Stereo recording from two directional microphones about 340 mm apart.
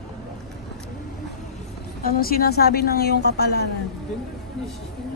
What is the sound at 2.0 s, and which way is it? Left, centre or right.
A woman's voice, left.